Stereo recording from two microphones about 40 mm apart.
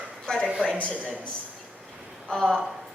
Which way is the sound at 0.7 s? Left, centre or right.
Left.